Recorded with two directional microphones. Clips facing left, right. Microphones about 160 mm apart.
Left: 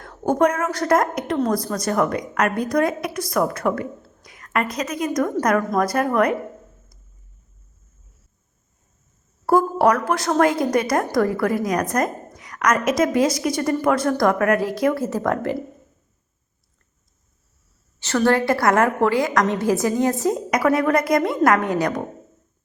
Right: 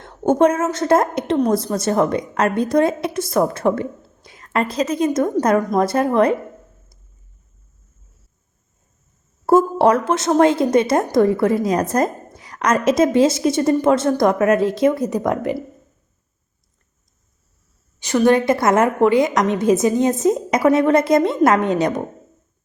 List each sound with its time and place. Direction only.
0.0 s a woman's voice: 25° right (ahead or behind)
9.5 s a woman's voice: 25° right (ahead or behind)
18.0 s a woman's voice: 15° right (ahead or behind)